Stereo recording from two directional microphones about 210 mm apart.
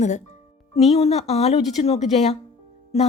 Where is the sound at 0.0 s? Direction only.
35° left (ahead or behind).